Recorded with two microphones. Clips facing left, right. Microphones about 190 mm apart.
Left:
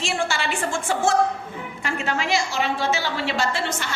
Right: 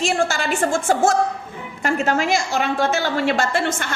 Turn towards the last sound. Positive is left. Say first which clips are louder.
# right 4 dB
turn(degrees=-50)  # may be behind; listen again after turning